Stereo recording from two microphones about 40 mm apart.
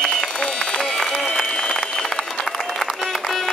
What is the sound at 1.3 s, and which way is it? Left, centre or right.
Applause, centre.